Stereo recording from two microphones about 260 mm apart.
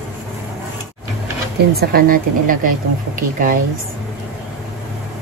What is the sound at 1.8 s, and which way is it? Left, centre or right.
Speech, right.